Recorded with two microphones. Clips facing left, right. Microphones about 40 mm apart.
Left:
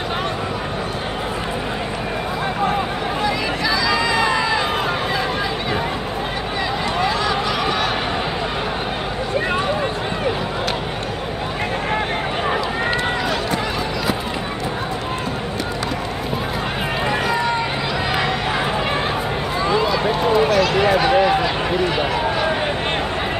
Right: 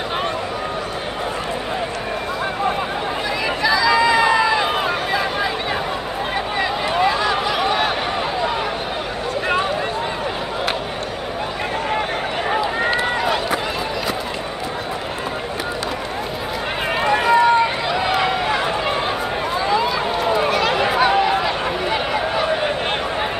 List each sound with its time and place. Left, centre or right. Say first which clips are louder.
3.6 s run: right 5 dB; centre
7.0 s a sound: right 3 dB; centre
13.2 s run: right 1 dB; centre
17.0 s run: right 7 dB; centre
19.6 s run: left 2 dB; centre